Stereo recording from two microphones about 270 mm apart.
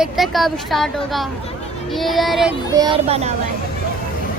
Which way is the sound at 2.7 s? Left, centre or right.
Centre.